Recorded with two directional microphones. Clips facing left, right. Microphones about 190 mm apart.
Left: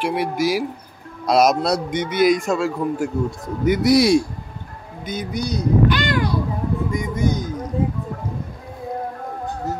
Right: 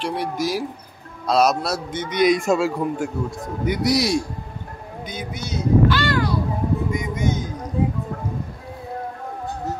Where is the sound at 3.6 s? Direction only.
50° left (ahead or behind).